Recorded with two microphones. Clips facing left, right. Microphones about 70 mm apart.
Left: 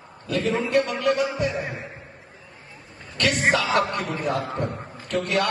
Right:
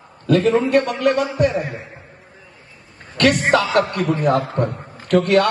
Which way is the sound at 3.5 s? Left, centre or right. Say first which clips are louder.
Right 5 dB; right.